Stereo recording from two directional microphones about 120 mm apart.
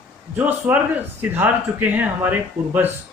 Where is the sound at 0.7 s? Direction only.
10° right (ahead or behind).